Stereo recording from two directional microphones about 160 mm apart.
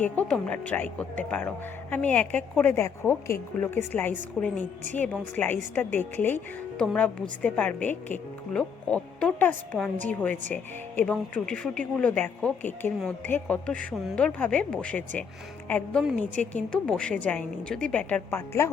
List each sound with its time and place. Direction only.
0.0 s speech: 5° left (ahead or behind)